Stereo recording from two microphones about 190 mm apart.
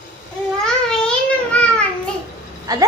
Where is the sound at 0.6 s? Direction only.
5° left (ahead or behind).